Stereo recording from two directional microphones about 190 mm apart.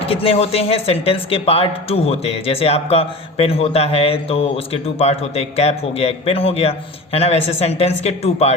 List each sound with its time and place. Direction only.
0.1 s speech: 30° left (ahead or behind)